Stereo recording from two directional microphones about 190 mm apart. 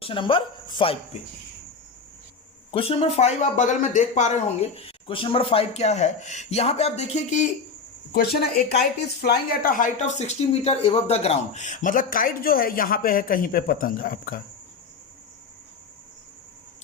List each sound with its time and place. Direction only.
0.0 s speech: 25° left (ahead or behind)
2.7 s speech: 30° left (ahead or behind)
8.1 s speech: 55° left (ahead or behind)